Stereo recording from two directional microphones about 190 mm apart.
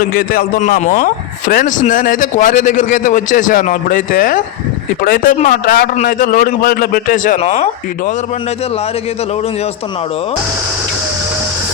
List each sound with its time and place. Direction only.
0.1 s a man's voice: 50° left (ahead or behind)
7.3 s speech: 35° left (ahead or behind)